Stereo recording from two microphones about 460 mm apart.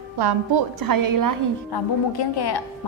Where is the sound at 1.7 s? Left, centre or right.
Left.